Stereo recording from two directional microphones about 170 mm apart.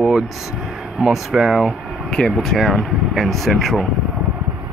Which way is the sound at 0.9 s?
5° right (ahead or behind).